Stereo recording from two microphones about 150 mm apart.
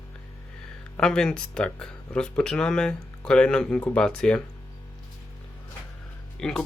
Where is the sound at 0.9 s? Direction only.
5° left (ahead or behind).